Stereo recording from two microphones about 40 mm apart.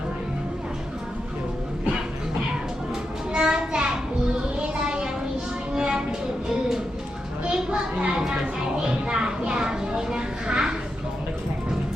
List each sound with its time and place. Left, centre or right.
3.3 s child singing: centre
5.7 s music: centre
7.4 s children playing: right
8.8 s a sound: centre